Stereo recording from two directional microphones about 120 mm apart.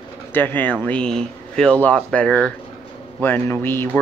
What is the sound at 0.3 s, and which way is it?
Speech, 15° left (ahead or behind).